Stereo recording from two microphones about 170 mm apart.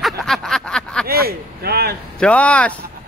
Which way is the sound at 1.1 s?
65° right (ahead or behind).